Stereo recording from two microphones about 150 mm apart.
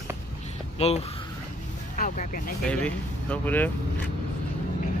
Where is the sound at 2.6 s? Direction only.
10° left (ahead or behind).